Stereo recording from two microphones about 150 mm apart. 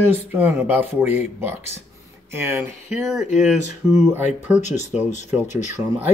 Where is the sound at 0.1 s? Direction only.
15° right (ahead or behind).